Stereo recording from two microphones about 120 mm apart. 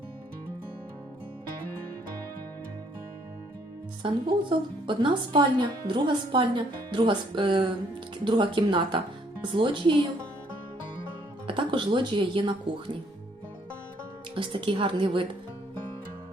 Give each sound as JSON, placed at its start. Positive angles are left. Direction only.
{"t": 4.0, "sound": "a woman's voice", "side_deg": -45}
{"t": 11.4, "sound": "speech", "side_deg": -45}
{"t": 14.3, "sound": "speech", "side_deg": -45}